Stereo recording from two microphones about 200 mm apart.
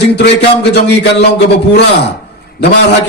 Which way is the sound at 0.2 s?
55° left (ahead or behind).